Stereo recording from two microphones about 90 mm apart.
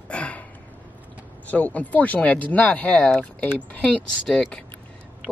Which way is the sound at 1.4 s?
15° left (ahead or behind).